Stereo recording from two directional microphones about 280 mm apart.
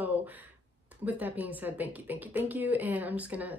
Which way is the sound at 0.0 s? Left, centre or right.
Centre.